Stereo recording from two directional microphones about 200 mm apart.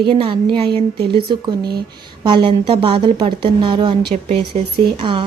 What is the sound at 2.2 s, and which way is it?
Speech, 25° right (ahead or behind).